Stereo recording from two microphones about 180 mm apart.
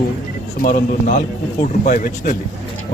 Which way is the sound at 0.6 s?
50° left (ahead or behind).